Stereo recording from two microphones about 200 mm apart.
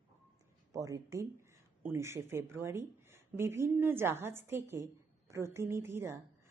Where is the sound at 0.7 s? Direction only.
15° right (ahead or behind).